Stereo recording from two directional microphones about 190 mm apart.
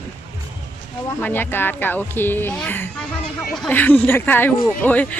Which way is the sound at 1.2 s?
10° left (ahead or behind).